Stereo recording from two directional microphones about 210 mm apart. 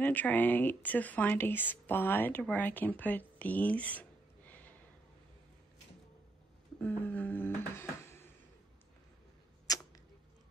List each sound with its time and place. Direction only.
0.0 s speech: 10° left (ahead or behind)
6.8 s a sound: 10° left (ahead or behind)
9.7 s arrow: 15° left (ahead or behind)